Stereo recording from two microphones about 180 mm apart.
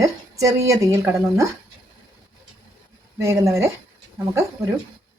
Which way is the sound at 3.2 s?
15° right (ahead or behind).